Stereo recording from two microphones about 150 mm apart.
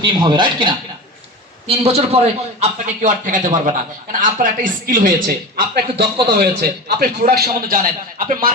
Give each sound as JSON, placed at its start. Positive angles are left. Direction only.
{"t": 0.0, "sound": "speech", "side_deg": -30}
{"t": 1.6, "sound": "a man's voice", "side_deg": -40}